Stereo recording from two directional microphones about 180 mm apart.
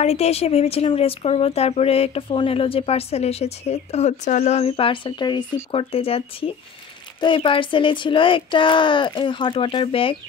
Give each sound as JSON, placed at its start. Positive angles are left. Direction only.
{"t": 0.0, "sound": "speech", "side_deg": 35}